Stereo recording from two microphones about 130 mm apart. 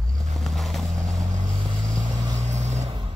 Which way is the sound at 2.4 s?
65° right (ahead or behind).